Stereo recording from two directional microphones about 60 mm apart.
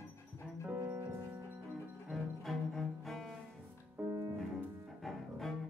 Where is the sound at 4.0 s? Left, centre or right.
Right.